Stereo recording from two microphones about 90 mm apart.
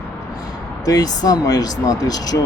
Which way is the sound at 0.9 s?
45° left (ahead or behind).